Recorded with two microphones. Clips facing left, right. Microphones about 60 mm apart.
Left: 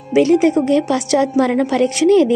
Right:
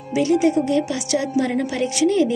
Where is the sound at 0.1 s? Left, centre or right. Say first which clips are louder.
Left 5 dB; left.